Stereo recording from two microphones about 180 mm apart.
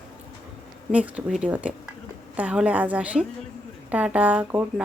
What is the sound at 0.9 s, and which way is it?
Speech, 5° right (ahead or behind).